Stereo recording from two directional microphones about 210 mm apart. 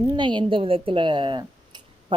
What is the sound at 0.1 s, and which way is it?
A woman's voice, 20° right (ahead or behind).